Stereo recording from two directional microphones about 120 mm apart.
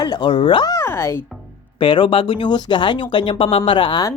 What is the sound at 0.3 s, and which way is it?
Speech, 45° left (ahead or behind).